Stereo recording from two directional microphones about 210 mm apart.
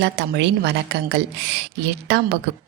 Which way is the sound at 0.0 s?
55° right (ahead or behind).